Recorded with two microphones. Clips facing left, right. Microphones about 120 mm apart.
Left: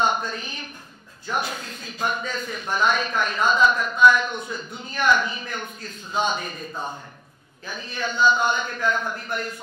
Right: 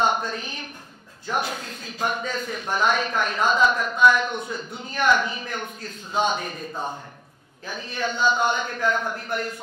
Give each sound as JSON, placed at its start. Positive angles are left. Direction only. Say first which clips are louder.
{"t": 0.0, "sound": "a woman's voice", "louder": "even", "side_deg": -55}
{"t": 6.7, "sound": "a man's voice", "louder": "right 2 dB", "side_deg": -30}
{"t": 7.6, "sound": "speech", "louder": "right 2 dB", "side_deg": -50}